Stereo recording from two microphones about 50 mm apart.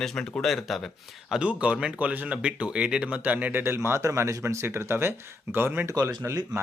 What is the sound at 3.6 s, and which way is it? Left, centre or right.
Speech, right.